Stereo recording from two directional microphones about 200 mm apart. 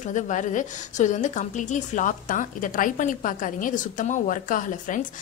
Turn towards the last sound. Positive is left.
turn(degrees=40)  # may be behind; listen again after turning